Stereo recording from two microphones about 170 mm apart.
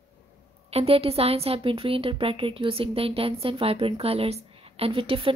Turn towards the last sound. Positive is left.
turn(degrees=-35)  # may be behind; listen again after turning